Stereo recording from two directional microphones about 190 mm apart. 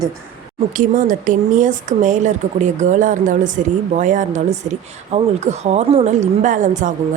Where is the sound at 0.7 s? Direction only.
45° right (ahead or behind).